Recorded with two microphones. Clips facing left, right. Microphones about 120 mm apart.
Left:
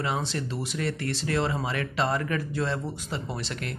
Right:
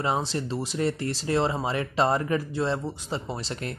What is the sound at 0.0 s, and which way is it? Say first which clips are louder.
Speech: right 3 dB; 30° right (ahead or behind).